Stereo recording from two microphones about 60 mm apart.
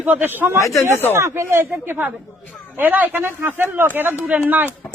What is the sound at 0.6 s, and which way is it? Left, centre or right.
Speech, left.